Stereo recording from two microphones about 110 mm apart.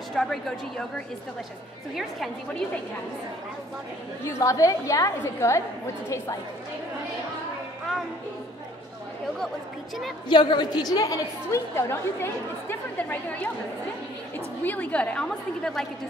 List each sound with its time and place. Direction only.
0.1 s a woman's voice: 5° left (ahead or behind)
4.3 s a woman's voice: 30° left (ahead or behind)
10.2 s a woman's voice: 45° left (ahead or behind); by 13.5 s 15° left (ahead or behind)
14.6 s a woman's voice: 15° left (ahead or behind)